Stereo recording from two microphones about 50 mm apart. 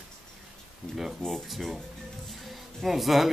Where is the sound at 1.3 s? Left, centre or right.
Centre.